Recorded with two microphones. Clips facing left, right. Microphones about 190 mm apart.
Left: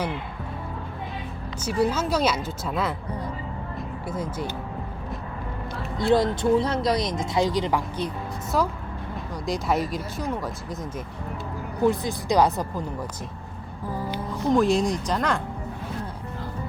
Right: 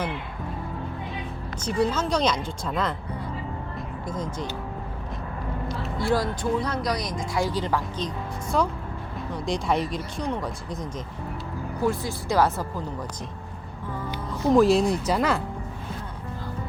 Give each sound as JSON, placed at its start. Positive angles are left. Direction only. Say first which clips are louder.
{"t": 1.6, "sound": "speech", "louder": "left 1 dB", "side_deg": 10}
{"t": 3.8, "sound": "music", "louder": "left 2 dB", "side_deg": 10}
{"t": 6.0, "sound": "speech", "louder": "left 5 dB", "side_deg": 20}
{"t": 11.9, "sound": "speech", "louder": "left 3 dB", "side_deg": 15}
{"t": 14.5, "sound": "speech", "louder": "right 2 dB", "side_deg": 0}